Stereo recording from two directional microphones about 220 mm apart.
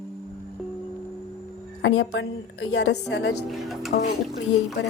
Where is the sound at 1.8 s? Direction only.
60° left (ahead or behind).